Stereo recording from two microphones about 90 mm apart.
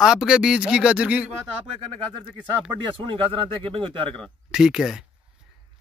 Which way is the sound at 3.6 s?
75° right (ahead or behind).